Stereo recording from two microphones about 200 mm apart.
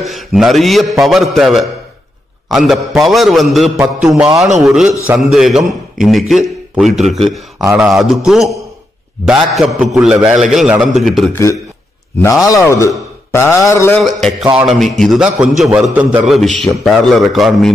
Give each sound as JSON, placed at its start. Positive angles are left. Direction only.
{"t": 0.0, "sound": "a man's voice", "side_deg": 0}
{"t": 12.2, "sound": "a man's voice", "side_deg": 15}
{"t": 14.0, "sound": "a man's voice", "side_deg": 0}